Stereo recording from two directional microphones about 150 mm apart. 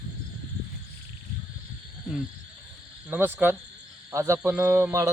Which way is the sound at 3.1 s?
15° right (ahead or behind).